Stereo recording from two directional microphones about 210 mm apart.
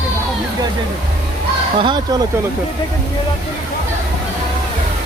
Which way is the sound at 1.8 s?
20° right (ahead or behind).